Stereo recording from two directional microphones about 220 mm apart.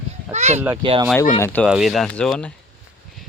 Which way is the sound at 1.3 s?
10° left (ahead or behind).